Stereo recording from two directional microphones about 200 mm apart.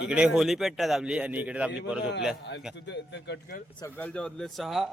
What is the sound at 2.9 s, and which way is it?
Speech, 60° left (ahead or behind).